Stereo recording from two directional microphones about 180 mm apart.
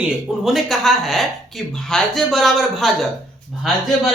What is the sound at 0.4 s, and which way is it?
A man's voice, centre (ahead or behind).